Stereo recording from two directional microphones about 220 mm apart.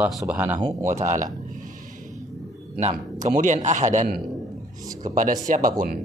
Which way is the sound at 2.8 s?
30° right (ahead or behind).